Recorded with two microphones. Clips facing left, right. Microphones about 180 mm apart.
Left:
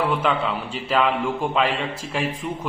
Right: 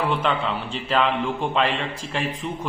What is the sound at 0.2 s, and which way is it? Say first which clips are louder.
A man's voice: left 1 dB; 5° left (ahead or behind).